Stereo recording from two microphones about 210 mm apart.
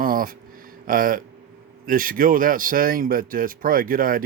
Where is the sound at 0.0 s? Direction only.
40° right (ahead or behind).